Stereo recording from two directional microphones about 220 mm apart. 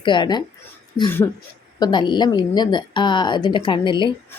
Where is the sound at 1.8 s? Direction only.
20° left (ahead or behind).